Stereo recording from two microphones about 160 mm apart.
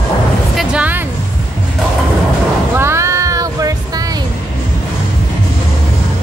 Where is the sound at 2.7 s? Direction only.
15° right (ahead or behind).